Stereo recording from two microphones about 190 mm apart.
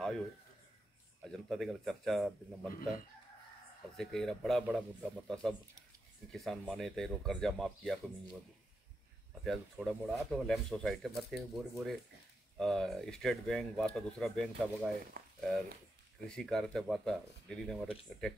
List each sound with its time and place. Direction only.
1.2 s speech: centre (ahead or behind)
3.9 s speech: centre (ahead or behind)
9.4 s speech: centre (ahead or behind)
15.2 s a sound: 50° right (ahead or behind)
16.3 s speech: 5° left (ahead or behind)